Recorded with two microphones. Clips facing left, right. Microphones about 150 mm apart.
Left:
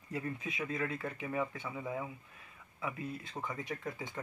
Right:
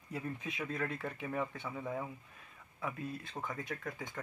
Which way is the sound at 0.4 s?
5° left (ahead or behind).